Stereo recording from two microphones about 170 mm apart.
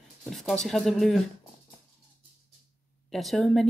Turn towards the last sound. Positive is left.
turn(degrees=0)  # may be behind; listen again after turning